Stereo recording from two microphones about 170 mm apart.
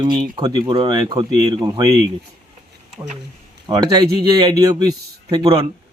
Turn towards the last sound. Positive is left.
turn(degrees=-25)  # may be behind; listen again after turning